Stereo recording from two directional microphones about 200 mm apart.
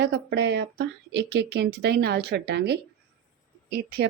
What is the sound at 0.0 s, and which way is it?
Speech, 60° right (ahead or behind).